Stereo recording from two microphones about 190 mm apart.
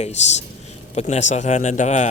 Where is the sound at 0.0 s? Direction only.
35° left (ahead or behind).